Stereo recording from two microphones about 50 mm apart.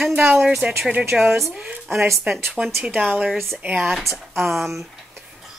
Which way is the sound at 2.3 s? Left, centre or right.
Right.